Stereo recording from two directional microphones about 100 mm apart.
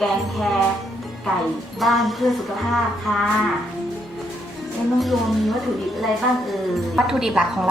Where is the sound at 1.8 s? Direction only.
Centre (ahead or behind).